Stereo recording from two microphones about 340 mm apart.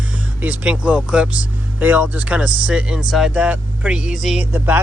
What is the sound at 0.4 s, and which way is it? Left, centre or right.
Speech, centre.